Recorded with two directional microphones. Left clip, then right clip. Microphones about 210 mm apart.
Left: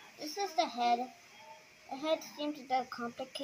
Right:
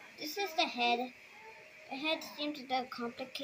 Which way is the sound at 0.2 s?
25° left (ahead or behind).